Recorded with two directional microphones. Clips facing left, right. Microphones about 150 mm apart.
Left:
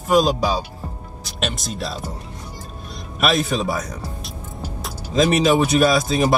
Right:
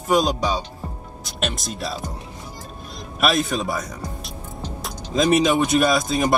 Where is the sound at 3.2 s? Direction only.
Centre (ahead or behind).